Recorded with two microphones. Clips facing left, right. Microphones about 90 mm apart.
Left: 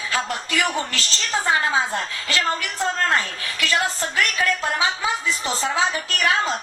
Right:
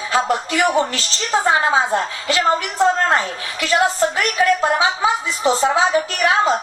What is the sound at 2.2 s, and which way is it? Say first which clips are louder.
A woman's voice: right 5 dB; 15° right (ahead or behind).